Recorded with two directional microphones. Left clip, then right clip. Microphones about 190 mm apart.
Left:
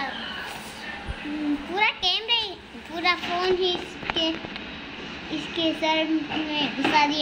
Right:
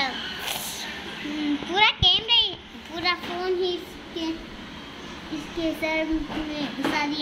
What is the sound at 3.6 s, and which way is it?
Speech, 40° left (ahead or behind).